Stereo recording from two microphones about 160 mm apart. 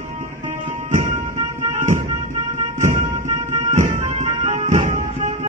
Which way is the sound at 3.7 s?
50° right (ahead or behind).